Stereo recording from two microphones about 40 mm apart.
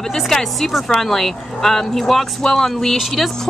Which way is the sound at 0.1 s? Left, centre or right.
Centre.